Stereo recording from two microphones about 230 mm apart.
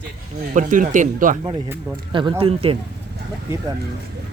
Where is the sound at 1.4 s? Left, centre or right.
Centre.